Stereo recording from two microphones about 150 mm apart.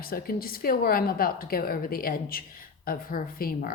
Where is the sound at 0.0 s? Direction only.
80° left.